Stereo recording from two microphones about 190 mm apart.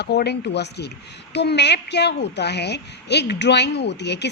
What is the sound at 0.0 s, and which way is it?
A woman's voice, 60° left (ahead or behind).